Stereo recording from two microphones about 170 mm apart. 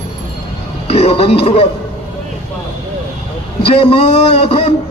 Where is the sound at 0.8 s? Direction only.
35° left (ahead or behind).